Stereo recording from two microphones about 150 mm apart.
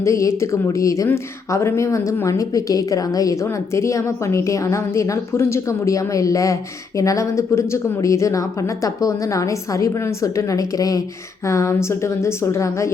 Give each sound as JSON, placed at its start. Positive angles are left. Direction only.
{"t": 0.0, "sound": "a woman's voice", "side_deg": 20}